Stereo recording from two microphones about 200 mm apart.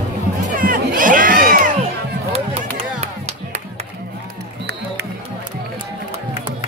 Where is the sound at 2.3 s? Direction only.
30° right (ahead or behind).